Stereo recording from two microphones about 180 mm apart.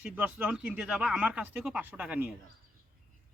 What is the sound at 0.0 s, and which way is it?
Speech, 10° right (ahead or behind).